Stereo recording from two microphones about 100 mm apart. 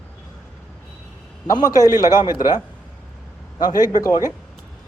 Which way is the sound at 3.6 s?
40° left (ahead or behind).